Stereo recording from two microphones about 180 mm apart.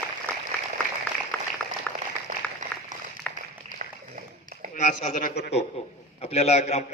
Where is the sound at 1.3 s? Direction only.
5° left (ahead or behind).